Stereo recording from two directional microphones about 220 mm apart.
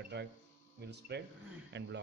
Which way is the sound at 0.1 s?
50° right (ahead or behind).